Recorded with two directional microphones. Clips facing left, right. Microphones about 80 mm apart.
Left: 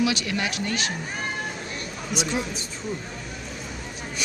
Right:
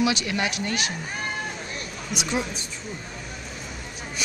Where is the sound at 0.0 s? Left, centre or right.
Right.